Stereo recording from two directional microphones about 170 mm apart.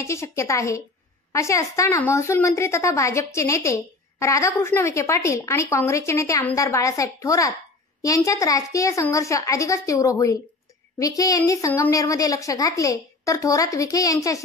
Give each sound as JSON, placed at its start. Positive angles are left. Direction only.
{"t": 0.0, "sound": "a woman's voice", "side_deg": 15}